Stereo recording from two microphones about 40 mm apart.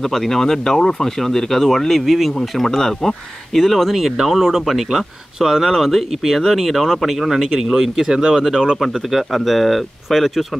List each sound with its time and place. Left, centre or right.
0.0 s speech: centre
2.0 s speech: centre
8.2 s speech: centre
8.8 s speech: centre